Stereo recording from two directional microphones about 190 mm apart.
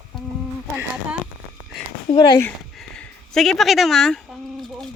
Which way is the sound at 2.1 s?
25° left (ahead or behind).